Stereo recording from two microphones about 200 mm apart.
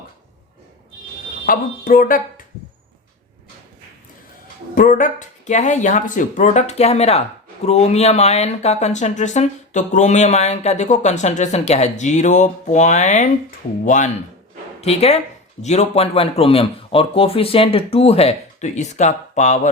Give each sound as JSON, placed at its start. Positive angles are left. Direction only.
{"t": 1.5, "sound": "speech", "side_deg": 45}
{"t": 4.7, "sound": "speech", "side_deg": 45}